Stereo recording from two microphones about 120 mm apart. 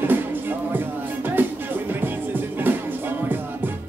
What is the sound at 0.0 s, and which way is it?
Music, 15° right (ahead or behind).